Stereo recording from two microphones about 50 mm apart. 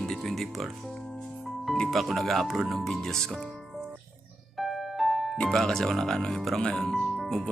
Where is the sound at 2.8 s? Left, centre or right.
Centre.